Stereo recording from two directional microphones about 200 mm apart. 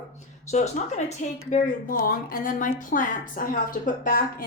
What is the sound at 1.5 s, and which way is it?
A woman's voice, 45° left (ahead or behind).